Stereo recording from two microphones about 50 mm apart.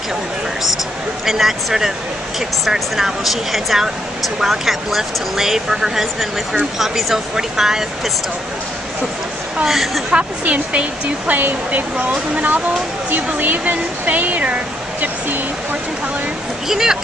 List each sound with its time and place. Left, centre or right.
1.2 s speech: centre
9.7 s speech: centre
10.1 s speech: right
11.3 s speech: right
16.6 s speech: centre